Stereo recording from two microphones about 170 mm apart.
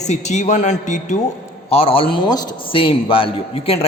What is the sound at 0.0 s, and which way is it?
Speech, 40° left (ahead or behind).